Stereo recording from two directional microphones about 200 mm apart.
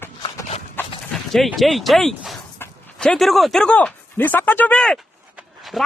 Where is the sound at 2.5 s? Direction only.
10° left (ahead or behind).